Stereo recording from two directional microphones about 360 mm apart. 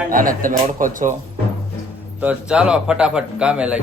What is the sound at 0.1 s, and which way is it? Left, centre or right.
Speech, right.